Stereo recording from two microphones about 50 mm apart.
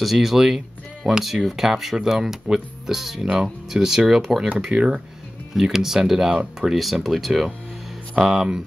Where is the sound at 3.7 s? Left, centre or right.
Centre.